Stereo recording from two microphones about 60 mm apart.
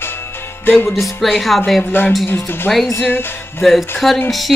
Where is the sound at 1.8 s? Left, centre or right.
Left.